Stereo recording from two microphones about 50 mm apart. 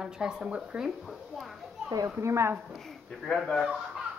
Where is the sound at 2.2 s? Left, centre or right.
Right.